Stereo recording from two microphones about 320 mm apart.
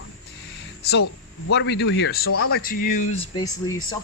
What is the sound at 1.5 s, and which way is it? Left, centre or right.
Speech, left.